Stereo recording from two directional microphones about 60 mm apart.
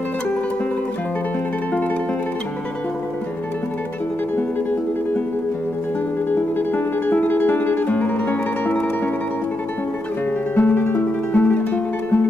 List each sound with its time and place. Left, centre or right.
1.7 s music: left
4.4 s music: left
6.3 s music: left
10.5 s music: left